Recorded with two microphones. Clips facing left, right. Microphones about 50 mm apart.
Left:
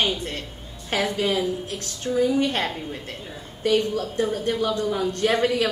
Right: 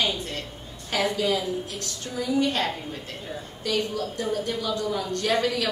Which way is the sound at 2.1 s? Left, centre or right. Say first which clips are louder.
Left 10 dB; centre.